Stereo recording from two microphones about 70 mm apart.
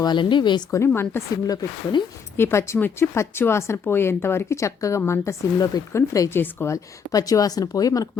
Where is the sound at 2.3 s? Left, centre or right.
Left.